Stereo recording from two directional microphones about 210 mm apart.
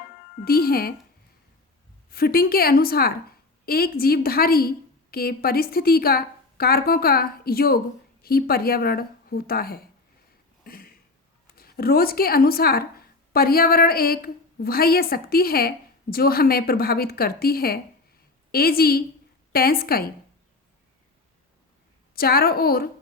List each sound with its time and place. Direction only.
0.4 s a woman's voice: 45° left (ahead or behind)
2.0 s a woman's voice: 45° left (ahead or behind)
10.6 s a sound: 45° left (ahead or behind)
11.5 s a woman's voice: 45° left (ahead or behind)
22.1 s a woman's voice: 45° left (ahead or behind)